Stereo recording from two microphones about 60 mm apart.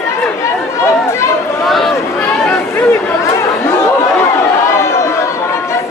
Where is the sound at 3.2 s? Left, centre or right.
Left.